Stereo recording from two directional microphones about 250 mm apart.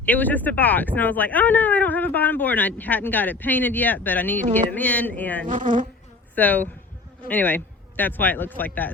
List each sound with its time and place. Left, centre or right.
0.0 s speech: centre
5.5 s insect: right
6.3 s speech: centre